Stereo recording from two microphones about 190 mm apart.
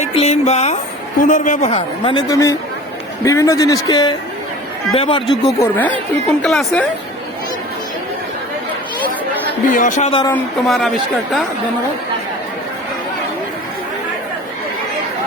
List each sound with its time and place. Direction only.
0.0 s a woman's voice: 35° left (ahead or behind)
5.3 s speech: 15° left (ahead or behind)
6.4 s a man's voice: centre (ahead or behind)
9.7 s a woman's voice: 40° left (ahead or behind)
10.1 s speech: 25° left (ahead or behind)
10.3 s a man's voice: 5° left (ahead or behind)